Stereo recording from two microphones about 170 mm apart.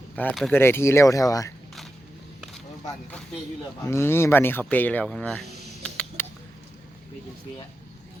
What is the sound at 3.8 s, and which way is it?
Speech, 15° left (ahead or behind).